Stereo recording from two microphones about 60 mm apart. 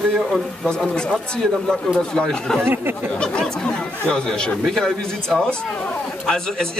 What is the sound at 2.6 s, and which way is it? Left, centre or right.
Speech, right.